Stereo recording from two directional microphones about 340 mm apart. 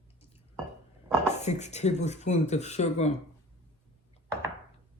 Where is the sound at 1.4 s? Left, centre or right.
Centre.